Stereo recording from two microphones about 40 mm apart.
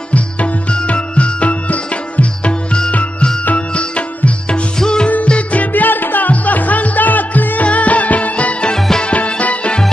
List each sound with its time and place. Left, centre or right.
0.1 s music: left; by 5.1 s centre
5.1 s music: left
5.7 s music: left
8.7 s music: centre
9.0 s music: left